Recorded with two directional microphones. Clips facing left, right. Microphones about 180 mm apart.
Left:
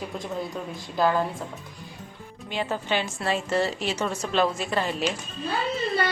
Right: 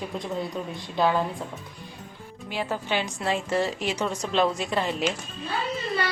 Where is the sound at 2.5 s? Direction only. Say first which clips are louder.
Left 1 dB; 10° right (ahead or behind).